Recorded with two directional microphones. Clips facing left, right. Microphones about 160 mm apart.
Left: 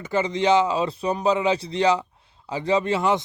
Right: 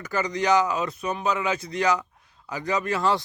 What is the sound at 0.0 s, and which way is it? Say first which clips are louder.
Speech: left 4 dB; 25° left (ahead or behind).